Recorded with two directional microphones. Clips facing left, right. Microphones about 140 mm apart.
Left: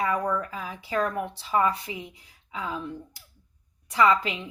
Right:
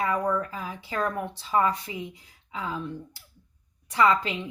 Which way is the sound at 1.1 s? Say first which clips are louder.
Even; 15° left (ahead or behind).